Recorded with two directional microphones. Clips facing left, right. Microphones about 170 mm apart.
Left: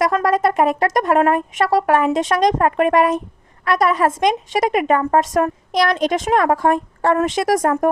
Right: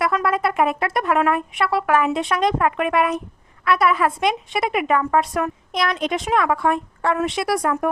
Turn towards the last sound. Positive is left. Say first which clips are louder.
# left 4 dB
turn(degrees=45)  # may be behind; listen again after turning